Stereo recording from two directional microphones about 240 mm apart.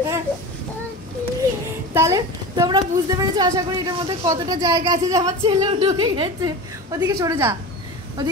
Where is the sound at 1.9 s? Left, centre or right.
Centre.